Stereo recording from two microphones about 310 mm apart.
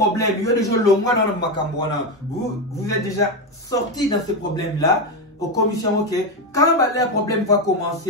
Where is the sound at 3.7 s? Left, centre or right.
Centre.